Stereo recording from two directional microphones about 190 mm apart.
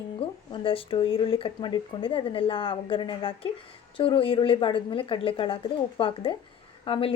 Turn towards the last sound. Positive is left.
turn(degrees=30)  # may be behind; listen again after turning